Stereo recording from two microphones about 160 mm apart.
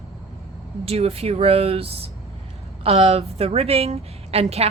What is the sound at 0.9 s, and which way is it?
A woman's voice, 40° right (ahead or behind).